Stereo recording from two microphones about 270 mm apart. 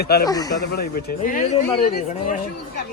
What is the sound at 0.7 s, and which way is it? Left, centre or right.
Speech, left.